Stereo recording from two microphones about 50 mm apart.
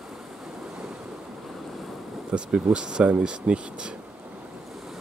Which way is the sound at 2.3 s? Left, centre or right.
Centre.